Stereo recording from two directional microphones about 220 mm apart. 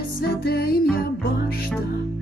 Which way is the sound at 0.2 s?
45° left (ahead or behind).